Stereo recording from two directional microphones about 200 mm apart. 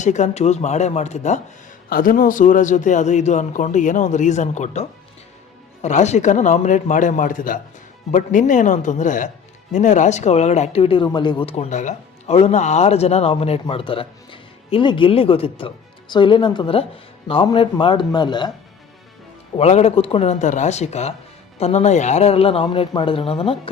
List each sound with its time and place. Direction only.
0.0 s speech: 35° left (ahead or behind)
19.5 s speech: 30° left (ahead or behind)